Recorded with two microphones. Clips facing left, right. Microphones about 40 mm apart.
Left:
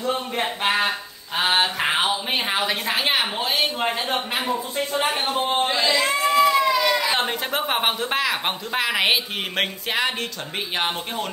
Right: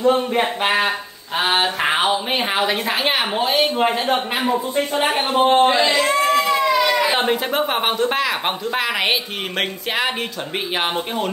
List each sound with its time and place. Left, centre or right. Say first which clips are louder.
0.0 s speech: right 7 dB; centre
5.0 s speech: right 8 dB; right
5.9 s baby cry: right 2 dB; centre
7.1 s speech: right 4 dB; centre